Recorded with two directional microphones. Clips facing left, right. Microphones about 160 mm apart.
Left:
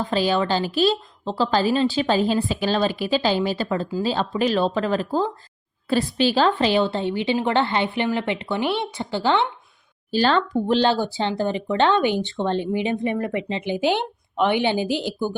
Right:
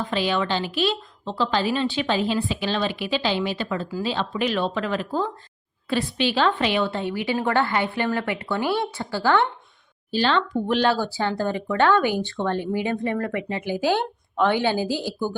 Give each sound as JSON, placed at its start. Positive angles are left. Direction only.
{"t": 0.1, "sound": "a woman's voice", "side_deg": 35}
{"t": 10.1, "sound": "speech", "side_deg": 40}